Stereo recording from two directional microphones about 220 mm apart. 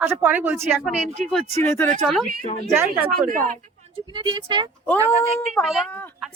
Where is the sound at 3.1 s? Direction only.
40° right (ahead or behind).